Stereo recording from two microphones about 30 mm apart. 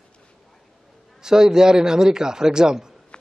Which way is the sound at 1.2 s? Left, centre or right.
Right.